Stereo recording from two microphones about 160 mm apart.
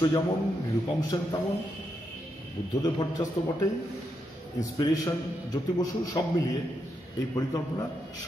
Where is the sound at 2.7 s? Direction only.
25° left (ahead or behind).